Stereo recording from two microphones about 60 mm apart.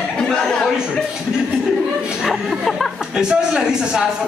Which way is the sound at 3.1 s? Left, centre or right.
Centre.